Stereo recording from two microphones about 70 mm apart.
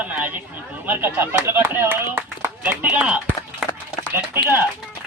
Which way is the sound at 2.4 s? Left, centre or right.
Right.